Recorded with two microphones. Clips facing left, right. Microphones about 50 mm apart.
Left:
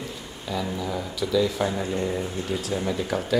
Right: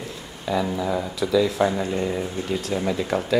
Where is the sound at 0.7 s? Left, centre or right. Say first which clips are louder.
Right 4 dB; centre.